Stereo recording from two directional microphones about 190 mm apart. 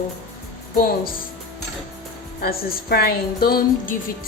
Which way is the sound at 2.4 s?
55° left (ahead or behind).